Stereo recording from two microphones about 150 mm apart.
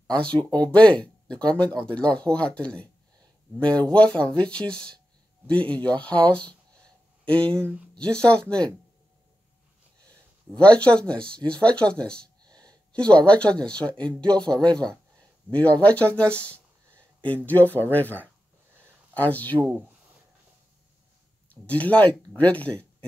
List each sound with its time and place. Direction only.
0.0 s speech: 5° left (ahead or behind)
10.6 s speech: 10° left (ahead or behind)
12.4 s a sound: 25° right (ahead or behind)
12.9 s speech: 5° left (ahead or behind)
21.5 s speech: 10° left (ahead or behind)